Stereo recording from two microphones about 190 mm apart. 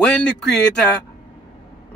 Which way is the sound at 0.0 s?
5° left (ahead or behind).